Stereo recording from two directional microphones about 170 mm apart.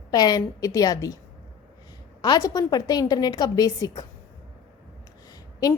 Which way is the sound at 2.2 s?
20° left (ahead or behind).